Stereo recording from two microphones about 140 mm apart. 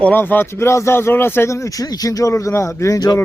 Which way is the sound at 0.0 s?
15° left (ahead or behind).